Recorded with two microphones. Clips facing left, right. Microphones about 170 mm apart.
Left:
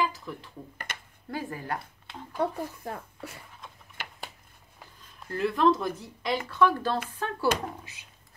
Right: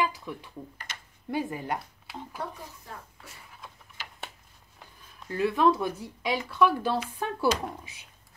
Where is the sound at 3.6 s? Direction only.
Centre (ahead or behind).